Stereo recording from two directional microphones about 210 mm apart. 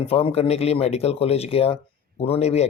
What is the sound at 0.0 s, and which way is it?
Speech, 25° left (ahead or behind).